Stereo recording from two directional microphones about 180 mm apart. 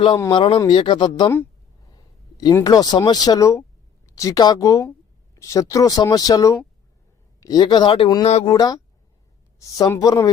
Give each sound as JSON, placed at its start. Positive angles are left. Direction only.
{"t": 0.3, "sound": "speech", "side_deg": 30}
{"t": 2.4, "sound": "speech", "side_deg": 20}
{"t": 8.4, "sound": "speech", "side_deg": 20}